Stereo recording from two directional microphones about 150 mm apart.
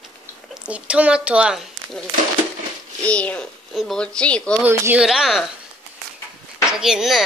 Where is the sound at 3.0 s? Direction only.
10° left (ahead or behind).